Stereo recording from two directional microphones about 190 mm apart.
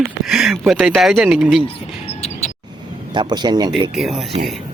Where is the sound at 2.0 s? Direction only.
35° left (ahead or behind).